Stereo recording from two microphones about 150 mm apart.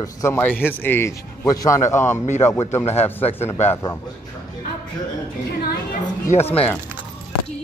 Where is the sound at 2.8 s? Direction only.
45° left (ahead or behind).